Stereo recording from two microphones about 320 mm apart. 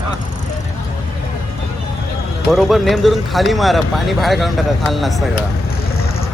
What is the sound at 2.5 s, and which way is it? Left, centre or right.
Speech, centre.